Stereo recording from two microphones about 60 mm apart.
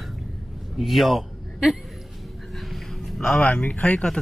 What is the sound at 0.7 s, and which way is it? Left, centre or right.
Speech, centre.